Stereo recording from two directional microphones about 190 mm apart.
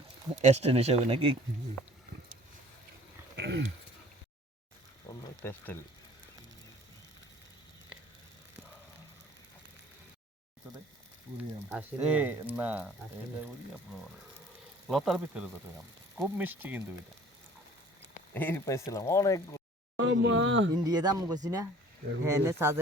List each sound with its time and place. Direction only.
0.3 s speech: 35° right (ahead or behind)
3.3 s a sound: 60° right (ahead or behind)
5.0 s a sound: 10° left (ahead or behind)
11.7 s speech: 10° right (ahead or behind)
14.8 s speech: centre (ahead or behind)
18.3 s speech: 10° left (ahead or behind)
20.0 s speech: 70° right (ahead or behind)
20.8 s speech: 20° right (ahead or behind)